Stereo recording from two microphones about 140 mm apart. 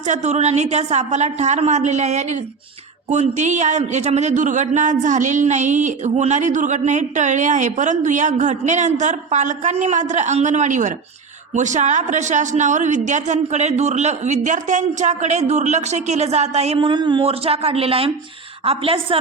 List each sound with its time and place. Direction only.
0.1 s a woman's voice: 55° right (ahead or behind)